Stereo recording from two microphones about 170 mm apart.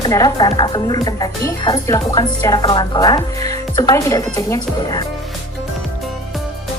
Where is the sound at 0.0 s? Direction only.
20° left (ahead or behind).